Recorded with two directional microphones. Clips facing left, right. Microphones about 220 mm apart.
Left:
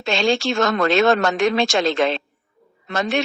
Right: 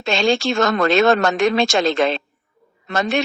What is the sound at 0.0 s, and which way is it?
Speech, 45° right (ahead or behind).